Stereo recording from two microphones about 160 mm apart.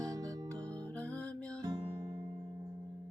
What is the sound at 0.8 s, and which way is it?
Music, 10° left (ahead or behind).